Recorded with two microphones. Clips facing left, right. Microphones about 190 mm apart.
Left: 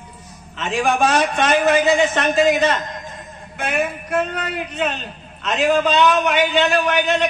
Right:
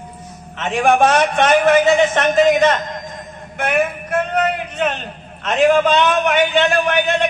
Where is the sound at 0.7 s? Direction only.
55° right (ahead or behind).